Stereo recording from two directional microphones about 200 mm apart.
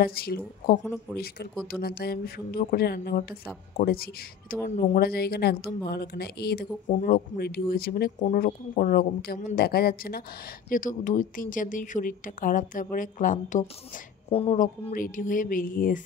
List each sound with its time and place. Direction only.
0.0 s a woman's voice: 50° left (ahead or behind); by 14.6 s 30° left (ahead or behind)
14.6 s a woman's voice: 40° left (ahead or behind)